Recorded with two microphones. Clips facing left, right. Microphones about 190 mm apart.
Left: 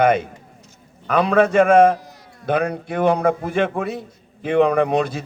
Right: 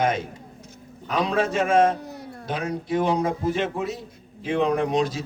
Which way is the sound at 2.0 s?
60° right (ahead or behind).